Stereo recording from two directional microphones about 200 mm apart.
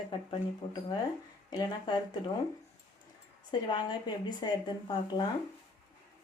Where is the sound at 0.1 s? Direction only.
25° left (ahead or behind).